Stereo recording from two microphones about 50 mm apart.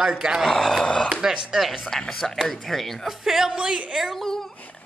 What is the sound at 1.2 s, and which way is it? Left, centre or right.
Speech, centre.